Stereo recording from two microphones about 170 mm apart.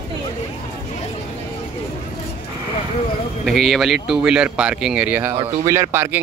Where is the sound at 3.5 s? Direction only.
Centre (ahead or behind).